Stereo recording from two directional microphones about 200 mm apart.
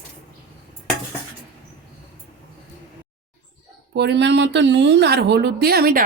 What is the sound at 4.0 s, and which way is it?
A woman's voice, 60° right (ahead or behind).